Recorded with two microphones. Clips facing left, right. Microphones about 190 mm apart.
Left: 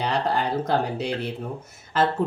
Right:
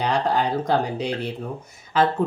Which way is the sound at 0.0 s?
5° left (ahead or behind).